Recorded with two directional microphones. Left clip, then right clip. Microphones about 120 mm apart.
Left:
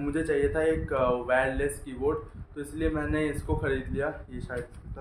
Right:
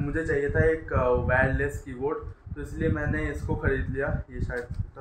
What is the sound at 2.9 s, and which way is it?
Speech, 10° left (ahead or behind).